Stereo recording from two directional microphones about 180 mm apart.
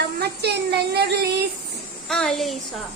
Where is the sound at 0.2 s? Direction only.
65° right (ahead or behind).